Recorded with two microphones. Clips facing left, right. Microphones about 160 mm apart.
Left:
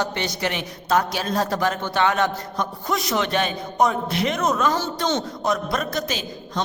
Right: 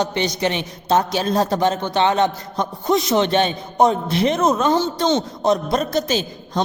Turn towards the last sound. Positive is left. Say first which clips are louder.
# right 6 dB
turn(degrees=-30)  # may be behind; listen again after turning